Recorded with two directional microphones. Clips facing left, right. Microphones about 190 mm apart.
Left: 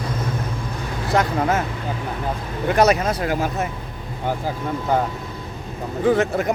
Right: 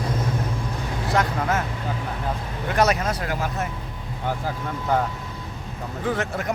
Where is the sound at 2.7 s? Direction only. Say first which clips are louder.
Left 4 dB; 25° left (ahead or behind).